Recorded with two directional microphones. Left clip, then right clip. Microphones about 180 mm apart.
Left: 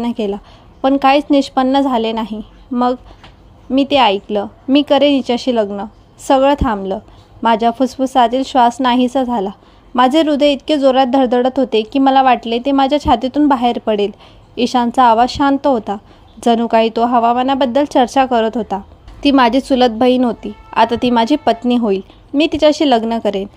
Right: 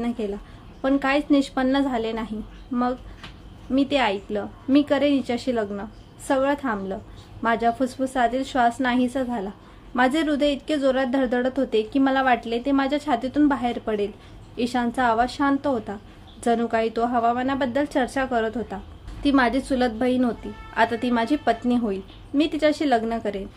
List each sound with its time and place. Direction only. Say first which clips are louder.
0.0 s speech: left 9 dB; 40° left (ahead or behind)